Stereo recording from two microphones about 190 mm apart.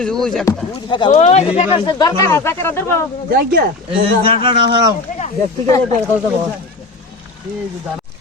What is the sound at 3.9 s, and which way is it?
Speech, 30° right (ahead or behind).